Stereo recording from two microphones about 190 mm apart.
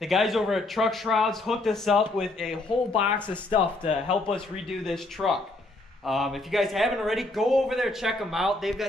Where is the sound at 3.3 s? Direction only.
25° left (ahead or behind).